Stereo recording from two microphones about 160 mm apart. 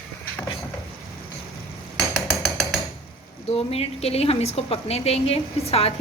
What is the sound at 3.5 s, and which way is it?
A woman's voice, 40° left (ahead or behind).